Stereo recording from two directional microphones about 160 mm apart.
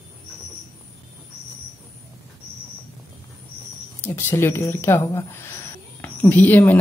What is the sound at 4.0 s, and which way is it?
Speech, 10° left (ahead or behind).